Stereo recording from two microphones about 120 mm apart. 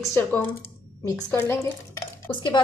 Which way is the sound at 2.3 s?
40° left (ahead or behind).